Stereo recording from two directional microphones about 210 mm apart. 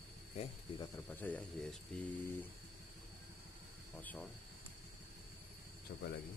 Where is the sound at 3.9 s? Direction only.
10° left (ahead or behind).